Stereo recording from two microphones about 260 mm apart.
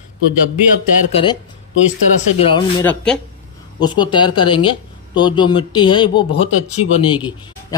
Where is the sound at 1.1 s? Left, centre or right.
Left.